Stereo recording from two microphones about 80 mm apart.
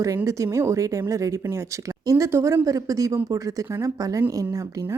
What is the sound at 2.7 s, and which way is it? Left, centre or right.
Speech, right.